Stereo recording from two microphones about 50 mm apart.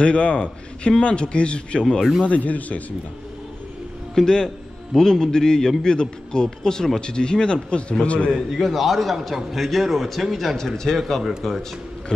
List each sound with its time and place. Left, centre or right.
0.0 s a man's voice: left
2.2 s speech: left
4.1 s a man's voice: centre
8.5 s a man's voice: centre